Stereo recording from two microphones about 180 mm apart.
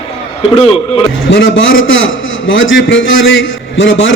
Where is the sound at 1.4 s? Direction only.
90° left.